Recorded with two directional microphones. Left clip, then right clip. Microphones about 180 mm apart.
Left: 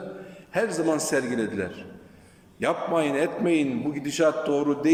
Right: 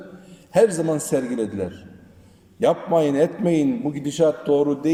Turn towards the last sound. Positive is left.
turn(degrees=-25)  # may be behind; listen again after turning